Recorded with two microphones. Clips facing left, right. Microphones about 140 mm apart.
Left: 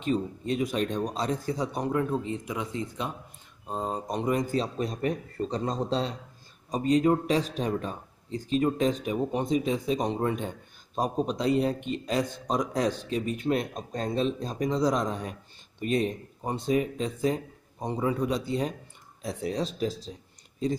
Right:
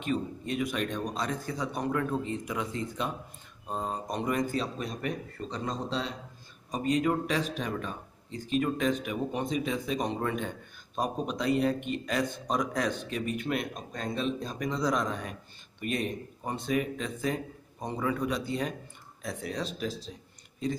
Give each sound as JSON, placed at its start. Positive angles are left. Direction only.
{"t": 0.0, "sound": "speech", "side_deg": 30}